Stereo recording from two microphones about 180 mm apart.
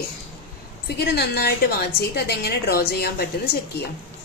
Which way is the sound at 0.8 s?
65° left (ahead or behind).